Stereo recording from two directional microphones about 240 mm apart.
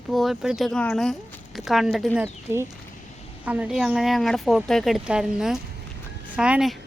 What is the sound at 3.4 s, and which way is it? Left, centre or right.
Speech, centre.